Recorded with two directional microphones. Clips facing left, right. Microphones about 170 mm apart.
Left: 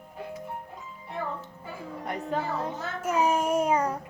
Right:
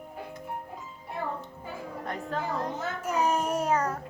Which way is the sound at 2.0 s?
10° left (ahead or behind).